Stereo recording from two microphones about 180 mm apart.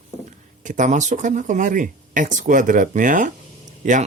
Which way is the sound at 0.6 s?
45° right (ahead or behind).